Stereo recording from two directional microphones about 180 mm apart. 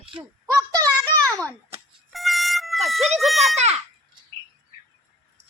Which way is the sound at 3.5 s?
35° right (ahead or behind).